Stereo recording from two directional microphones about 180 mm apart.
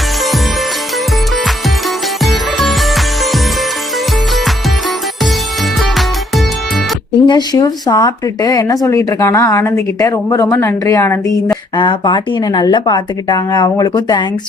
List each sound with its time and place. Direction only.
2.2 s music: centre (ahead or behind)
5.8 s music: centre (ahead or behind)
7.3 s speech: 25° left (ahead or behind)
11.8 s speech: 25° left (ahead or behind)